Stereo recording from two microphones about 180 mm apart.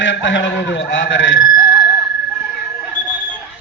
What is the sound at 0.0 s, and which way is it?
A man's voice, 90° left.